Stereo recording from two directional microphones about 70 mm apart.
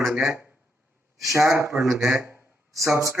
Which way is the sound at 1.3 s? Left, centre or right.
Right.